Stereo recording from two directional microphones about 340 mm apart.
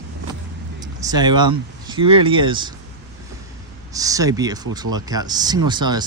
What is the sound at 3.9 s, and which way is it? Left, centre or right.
Speech, centre.